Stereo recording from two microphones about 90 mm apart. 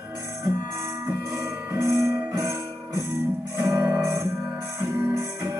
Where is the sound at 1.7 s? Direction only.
35° right (ahead or behind).